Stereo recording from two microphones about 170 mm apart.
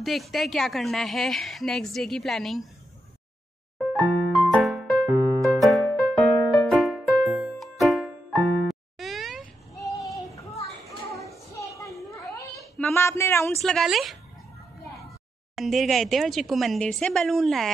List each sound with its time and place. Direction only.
0.0 s a woman's voice: centre (ahead or behind)
3.7 s music: centre (ahead or behind)
11.8 s children playing: 20° left (ahead or behind)
12.7 s a sound: 15° left (ahead or behind)
13.6 s a woman's voice: centre (ahead or behind)
15.5 s a woman's voice: centre (ahead or behind)